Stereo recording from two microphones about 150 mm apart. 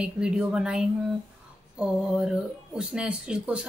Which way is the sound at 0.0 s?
5° right (ahead or behind).